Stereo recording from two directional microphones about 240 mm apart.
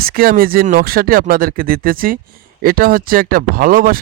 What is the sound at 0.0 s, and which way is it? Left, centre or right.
Speech, right.